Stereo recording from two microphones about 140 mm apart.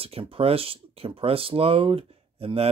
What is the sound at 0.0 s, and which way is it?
Speech, 45° right (ahead or behind).